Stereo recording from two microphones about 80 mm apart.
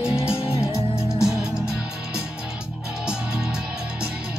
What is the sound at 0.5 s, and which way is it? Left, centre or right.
Music, left.